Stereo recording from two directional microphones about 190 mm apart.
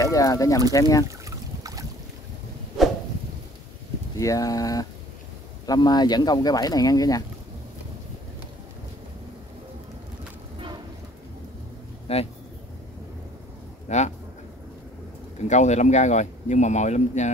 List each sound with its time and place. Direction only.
0.0 s speech: 15° left (ahead or behind)
1.0 s a sound: 15° right (ahead or behind)
4.2 s speech: 20° left (ahead or behind)
12.1 s a man's voice: 30° left (ahead or behind)
13.8 s speech: 35° left (ahead or behind)
15.4 s a man's voice: 40° left (ahead or behind)